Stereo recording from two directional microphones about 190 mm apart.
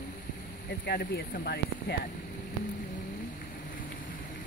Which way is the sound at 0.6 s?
55° left (ahead or behind).